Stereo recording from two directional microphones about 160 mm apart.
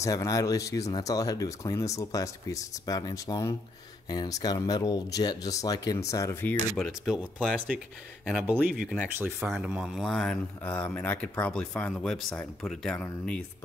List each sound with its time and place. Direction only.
0.0 s speech: 20° left (ahead or behind)
6.8 s speech: centre (ahead or behind)